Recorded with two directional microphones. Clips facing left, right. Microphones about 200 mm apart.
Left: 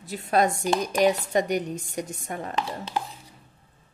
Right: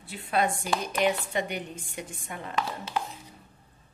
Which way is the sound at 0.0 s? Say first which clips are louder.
Left 5 dB; 40° left (ahead or behind).